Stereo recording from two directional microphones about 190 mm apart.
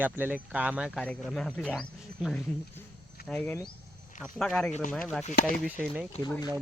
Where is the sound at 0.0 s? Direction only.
10° right (ahead or behind).